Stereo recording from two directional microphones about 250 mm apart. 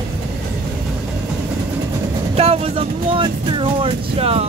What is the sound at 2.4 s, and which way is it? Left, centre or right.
Speech, right.